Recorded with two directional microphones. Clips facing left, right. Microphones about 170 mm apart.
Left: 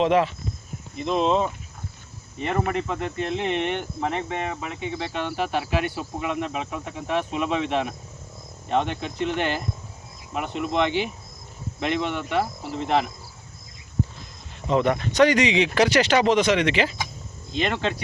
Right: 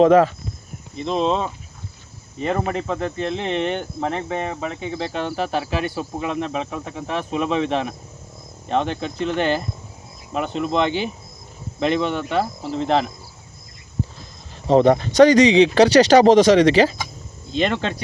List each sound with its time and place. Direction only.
0.0 s speech: 45° right (ahead or behind)
0.9 s speech: 35° right (ahead or behind)
2.4 s speech: 35° right (ahead or behind)
14.7 s speech: 35° right (ahead or behind)